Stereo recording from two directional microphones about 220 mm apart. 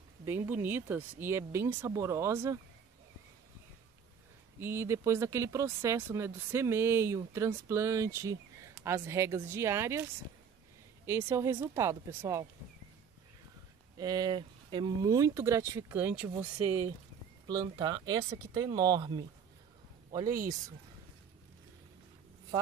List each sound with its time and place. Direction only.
0.2 s speech: 10° right (ahead or behind)
4.6 s speech: 10° right (ahead or behind)
11.1 s speech: 10° right (ahead or behind)
13.9 s speech: 15° right (ahead or behind)
17.5 s a man's voice: 20° right (ahead or behind)